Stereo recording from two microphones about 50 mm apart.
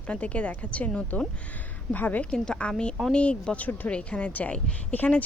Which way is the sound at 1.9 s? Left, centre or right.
Left.